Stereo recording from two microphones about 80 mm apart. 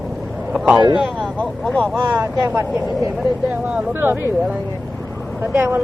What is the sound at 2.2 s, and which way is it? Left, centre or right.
Speech, right.